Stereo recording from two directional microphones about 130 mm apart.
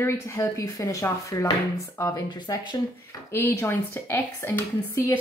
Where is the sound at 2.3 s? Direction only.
35° left (ahead or behind); by 5.2 s 20° left (ahead or behind).